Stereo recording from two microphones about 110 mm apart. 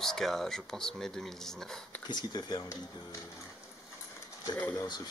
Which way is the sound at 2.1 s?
40° left (ahead or behind).